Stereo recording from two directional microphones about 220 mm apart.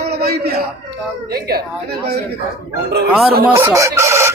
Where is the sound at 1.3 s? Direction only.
45° right (ahead or behind).